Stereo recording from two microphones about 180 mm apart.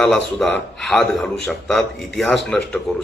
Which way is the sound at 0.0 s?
5° left (ahead or behind).